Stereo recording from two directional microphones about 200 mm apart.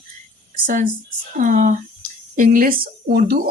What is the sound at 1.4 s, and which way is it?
Speech, 40° right (ahead or behind).